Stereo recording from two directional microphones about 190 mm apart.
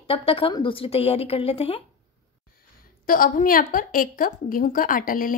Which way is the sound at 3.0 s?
50° left (ahead or behind).